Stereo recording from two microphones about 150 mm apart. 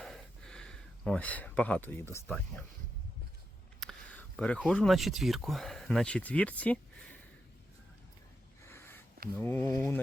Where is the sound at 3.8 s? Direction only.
5° left (ahead or behind).